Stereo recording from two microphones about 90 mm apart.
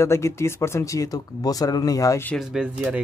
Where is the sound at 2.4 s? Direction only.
10° right (ahead or behind).